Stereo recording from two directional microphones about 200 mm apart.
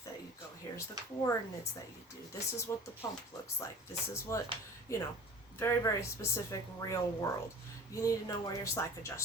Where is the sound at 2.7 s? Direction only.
15° left (ahead or behind).